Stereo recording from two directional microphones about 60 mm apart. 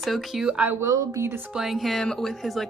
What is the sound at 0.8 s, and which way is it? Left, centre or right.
Speech, right.